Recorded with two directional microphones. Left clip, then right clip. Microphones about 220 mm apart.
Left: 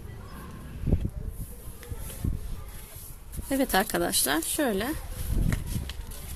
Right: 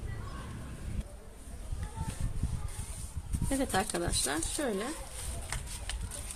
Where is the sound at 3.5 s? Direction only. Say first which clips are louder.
Left 6 dB; 30° left (ahead or behind).